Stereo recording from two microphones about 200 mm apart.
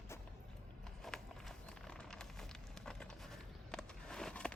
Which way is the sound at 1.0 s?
Centre (ahead or behind).